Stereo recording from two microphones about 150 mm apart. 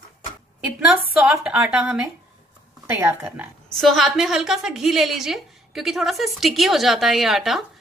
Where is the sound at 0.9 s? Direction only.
5° right (ahead or behind).